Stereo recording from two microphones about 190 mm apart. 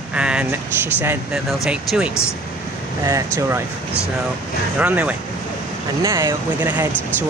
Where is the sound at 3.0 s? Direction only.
15° right (ahead or behind).